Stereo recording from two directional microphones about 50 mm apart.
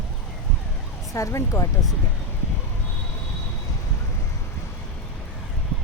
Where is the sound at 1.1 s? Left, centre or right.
Left.